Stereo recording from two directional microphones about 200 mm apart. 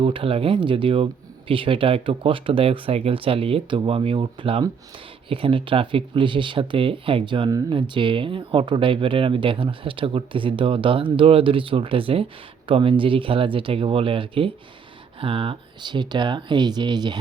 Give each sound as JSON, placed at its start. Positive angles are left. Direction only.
{"t": 0.0, "sound": "speech", "side_deg": -25}